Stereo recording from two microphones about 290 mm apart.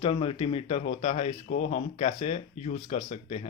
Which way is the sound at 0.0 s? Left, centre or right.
Centre.